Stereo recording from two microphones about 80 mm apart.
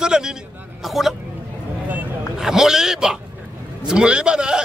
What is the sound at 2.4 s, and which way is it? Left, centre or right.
A man's voice, centre.